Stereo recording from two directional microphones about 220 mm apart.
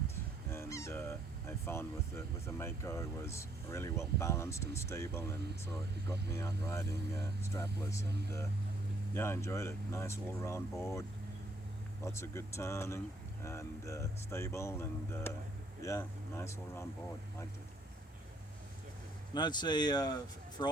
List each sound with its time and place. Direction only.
0.5 s speech: 10° left (ahead or behind)
8.0 s speech: 50° right (ahead or behind)
9.1 s speech: 10° left (ahead or behind)
12.1 s speech: 10° left (ahead or behind)
19.3 s speech: 20° left (ahead or behind)